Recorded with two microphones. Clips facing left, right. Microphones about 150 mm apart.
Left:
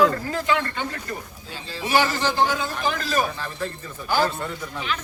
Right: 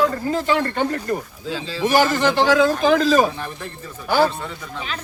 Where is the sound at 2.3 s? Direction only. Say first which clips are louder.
Right 7 dB; 85° right.